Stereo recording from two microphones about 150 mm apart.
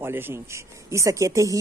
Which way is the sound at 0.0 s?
15° right (ahead or behind).